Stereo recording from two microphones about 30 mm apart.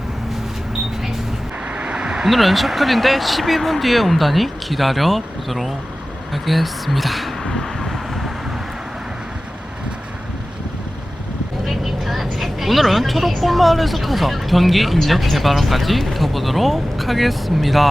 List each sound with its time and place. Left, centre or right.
1.6 s vehicle: right
1.9 s a sound: right
2.2 s speech: centre
7.5 s vehicle: centre
11.6 s a woman's voice: centre